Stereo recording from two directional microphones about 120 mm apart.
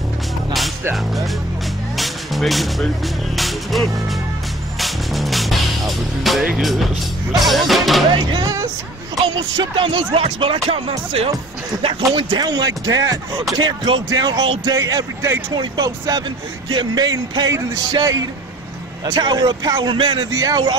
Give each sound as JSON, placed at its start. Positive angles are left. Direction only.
{"t": 0.9, "sound": "speech", "side_deg": 0}
{"t": 2.0, "sound": "music", "side_deg": 0}
{"t": 7.4, "sound": "speech", "side_deg": 0}
{"t": 9.6, "sound": "speech", "side_deg": -45}
{"t": 12.3, "sound": "speech", "side_deg": -35}